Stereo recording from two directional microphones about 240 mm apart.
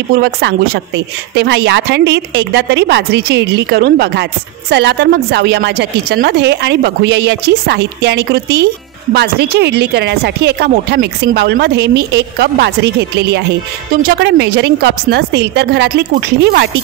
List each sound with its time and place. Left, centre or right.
0.1 s a woman's voice: right